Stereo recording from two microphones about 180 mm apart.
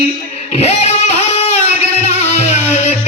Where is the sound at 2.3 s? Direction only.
40° left (ahead or behind).